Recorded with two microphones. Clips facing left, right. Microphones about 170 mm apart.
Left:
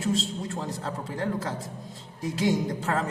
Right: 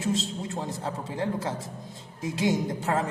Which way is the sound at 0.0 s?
20° right (ahead or behind).